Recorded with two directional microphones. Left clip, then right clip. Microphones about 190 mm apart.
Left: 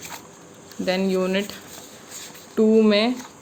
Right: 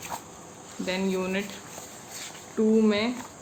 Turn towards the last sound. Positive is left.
turn(degrees=45)  # may be behind; listen again after turning